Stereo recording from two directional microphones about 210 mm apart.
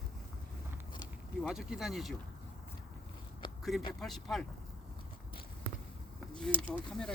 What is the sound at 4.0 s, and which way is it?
Speech, centre (ahead or behind).